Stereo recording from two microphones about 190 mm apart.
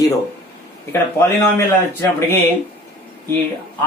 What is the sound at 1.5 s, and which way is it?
Speech, 10° left (ahead or behind).